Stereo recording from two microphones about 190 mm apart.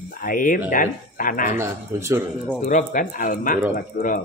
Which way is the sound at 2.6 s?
40° left (ahead or behind).